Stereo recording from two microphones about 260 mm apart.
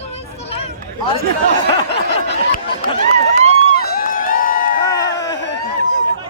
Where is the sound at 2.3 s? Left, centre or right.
Left.